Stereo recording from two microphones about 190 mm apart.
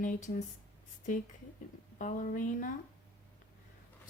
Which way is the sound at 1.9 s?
45° left (ahead or behind).